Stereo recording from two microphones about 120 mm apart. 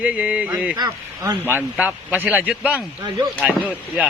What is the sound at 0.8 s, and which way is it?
Speech, 35° right (ahead or behind).